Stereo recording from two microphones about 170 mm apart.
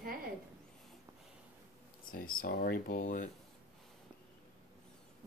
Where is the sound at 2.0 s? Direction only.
55° left (ahead or behind).